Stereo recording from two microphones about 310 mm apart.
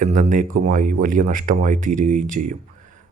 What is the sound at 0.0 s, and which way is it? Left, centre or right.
Speech, right.